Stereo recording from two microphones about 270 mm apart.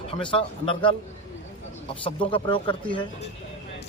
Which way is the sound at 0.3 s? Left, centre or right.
Centre.